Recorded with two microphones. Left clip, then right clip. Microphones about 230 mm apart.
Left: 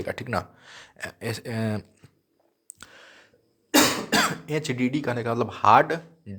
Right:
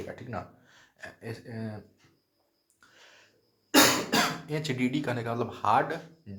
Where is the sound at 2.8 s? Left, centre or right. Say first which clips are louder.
Left 11 dB; left.